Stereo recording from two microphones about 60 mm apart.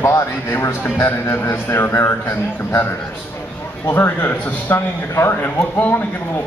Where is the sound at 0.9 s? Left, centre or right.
Left.